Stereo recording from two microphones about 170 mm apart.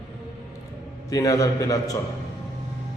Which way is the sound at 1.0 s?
20° left (ahead or behind).